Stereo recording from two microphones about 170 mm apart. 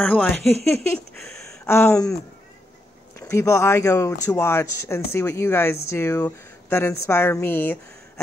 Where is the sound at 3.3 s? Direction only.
15° left (ahead or behind).